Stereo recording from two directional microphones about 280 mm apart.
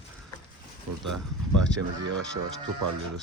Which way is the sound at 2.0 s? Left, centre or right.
Right.